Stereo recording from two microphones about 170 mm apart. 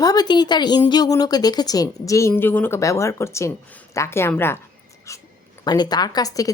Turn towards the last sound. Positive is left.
turn(degrees=20)  # may be behind; listen again after turning